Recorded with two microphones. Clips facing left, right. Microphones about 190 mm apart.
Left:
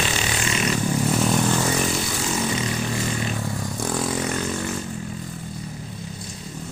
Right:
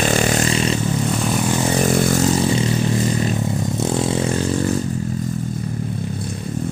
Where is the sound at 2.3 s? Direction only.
30° right (ahead or behind).